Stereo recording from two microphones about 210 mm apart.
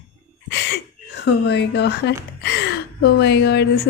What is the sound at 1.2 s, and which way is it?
A woman's voice, 55° left (ahead or behind).